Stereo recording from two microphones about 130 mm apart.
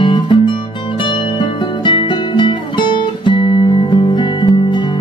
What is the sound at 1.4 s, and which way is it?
Music, 40° left (ahead or behind).